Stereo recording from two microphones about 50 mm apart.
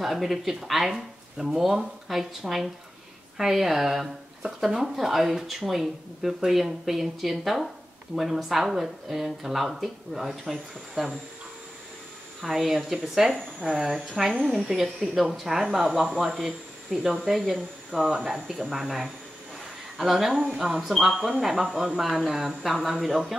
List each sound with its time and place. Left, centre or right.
0.0 s speech: centre
12.4 s speech: centre
13.6 s speech: centre
13.8 s speech: centre
14.4 s speech: centre